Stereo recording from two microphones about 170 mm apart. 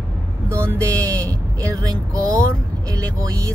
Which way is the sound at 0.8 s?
20° right (ahead or behind).